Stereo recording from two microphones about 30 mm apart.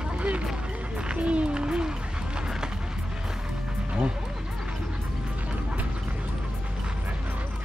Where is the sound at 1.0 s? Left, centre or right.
Right.